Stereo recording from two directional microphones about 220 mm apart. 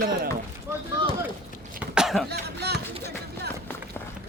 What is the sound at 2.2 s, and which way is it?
Music, 50° right (ahead or behind).